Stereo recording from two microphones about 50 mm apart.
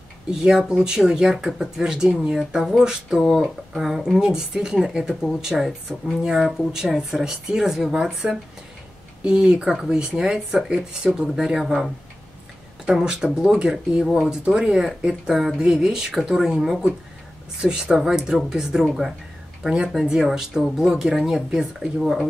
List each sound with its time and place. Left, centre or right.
0.3 s speech: centre
3.2 s speech: centre
11.6 s speech: centre
12.9 s speech: centre